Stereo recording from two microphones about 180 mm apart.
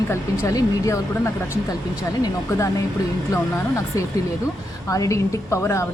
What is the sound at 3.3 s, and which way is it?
Speech, 15° left (ahead or behind).